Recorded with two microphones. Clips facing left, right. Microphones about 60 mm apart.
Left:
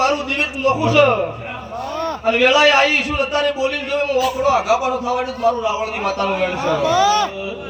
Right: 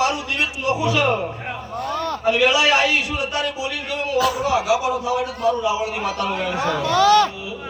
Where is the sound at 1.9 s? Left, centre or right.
Centre.